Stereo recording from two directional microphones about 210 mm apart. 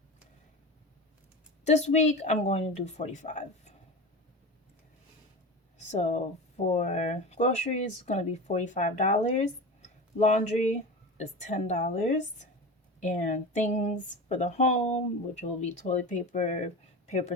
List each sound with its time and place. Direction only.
1.6 s speech: 30° left (ahead or behind)
5.7 s a sound: 35° left (ahead or behind)
6.7 s speech: 35° left (ahead or behind)